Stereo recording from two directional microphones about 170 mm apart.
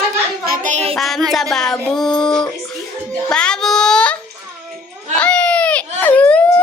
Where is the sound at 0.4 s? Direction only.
55° right (ahead or behind).